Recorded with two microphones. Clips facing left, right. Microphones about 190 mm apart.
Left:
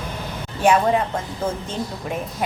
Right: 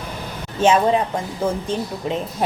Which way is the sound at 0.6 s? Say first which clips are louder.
Right 1 dB; 20° right (ahead or behind).